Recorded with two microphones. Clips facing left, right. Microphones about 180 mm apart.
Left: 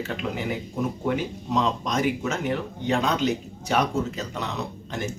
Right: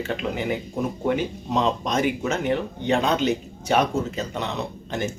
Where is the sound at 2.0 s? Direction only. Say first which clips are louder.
Right 2 dB; centre (ahead or behind).